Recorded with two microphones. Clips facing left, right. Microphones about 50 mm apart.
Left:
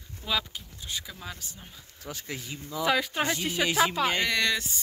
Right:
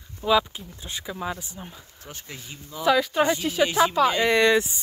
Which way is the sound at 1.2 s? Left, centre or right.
Right.